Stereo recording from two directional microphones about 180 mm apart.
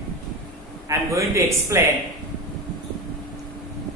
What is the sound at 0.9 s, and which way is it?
Speech, 15° right (ahead or behind).